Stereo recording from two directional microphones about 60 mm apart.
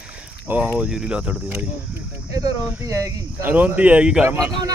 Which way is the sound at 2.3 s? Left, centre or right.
Right.